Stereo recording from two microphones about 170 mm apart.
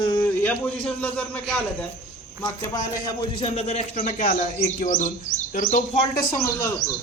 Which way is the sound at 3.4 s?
35° left (ahead or behind).